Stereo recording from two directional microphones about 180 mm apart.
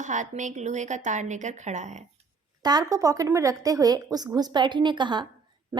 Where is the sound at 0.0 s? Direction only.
45° right (ahead or behind).